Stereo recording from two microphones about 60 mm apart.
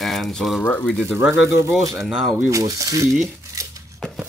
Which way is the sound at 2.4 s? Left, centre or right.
Right.